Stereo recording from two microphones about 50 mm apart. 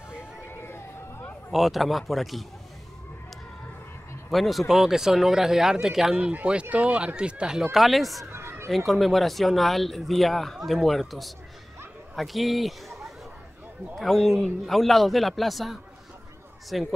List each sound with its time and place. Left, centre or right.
0.6 s a sound: left
1.5 s speech: centre
4.3 s speech: centre
6.1 s speech: right
7.7 s speech: centre
8.3 s a sound: right
8.6 s speech: centre